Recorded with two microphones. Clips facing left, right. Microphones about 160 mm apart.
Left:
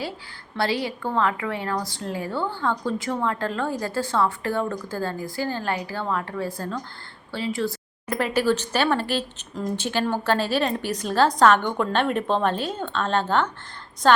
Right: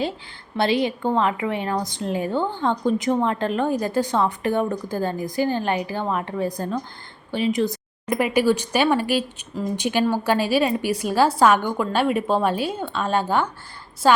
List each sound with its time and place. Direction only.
0.5 s a woman's voice: 20° right (ahead or behind)